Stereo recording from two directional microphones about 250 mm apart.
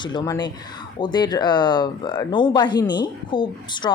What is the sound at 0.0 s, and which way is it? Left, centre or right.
Speech, centre.